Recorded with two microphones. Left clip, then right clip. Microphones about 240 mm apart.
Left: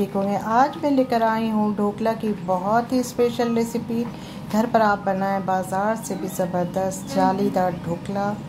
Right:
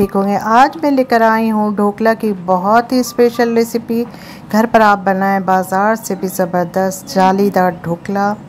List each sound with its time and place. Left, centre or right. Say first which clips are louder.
0.1 s speech: right 9 dB; right